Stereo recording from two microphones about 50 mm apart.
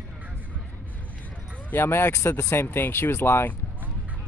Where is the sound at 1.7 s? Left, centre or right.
Left.